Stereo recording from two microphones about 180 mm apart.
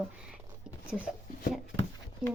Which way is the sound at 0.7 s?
5° right (ahead or behind).